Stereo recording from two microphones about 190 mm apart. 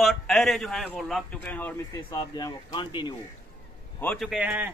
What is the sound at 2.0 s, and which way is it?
Speech, 20° left (ahead or behind).